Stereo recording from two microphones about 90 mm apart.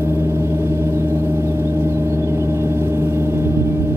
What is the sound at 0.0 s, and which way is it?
Gong, 30° right (ahead or behind).